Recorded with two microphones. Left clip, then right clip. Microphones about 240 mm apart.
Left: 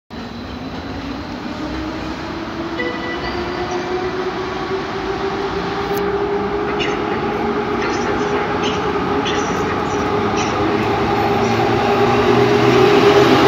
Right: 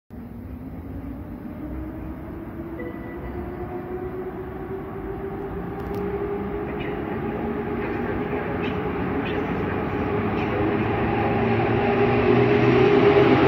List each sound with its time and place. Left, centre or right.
11.2 s train: centre